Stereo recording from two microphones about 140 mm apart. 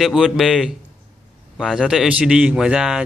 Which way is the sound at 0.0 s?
5° right (ahead or behind).